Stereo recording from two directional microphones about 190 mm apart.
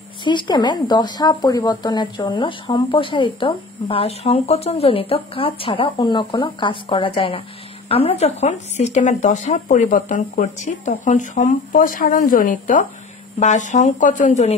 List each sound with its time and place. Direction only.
0.2 s speech: 25° left (ahead or behind)